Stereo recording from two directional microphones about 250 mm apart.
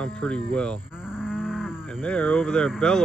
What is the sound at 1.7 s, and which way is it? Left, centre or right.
Speech, centre.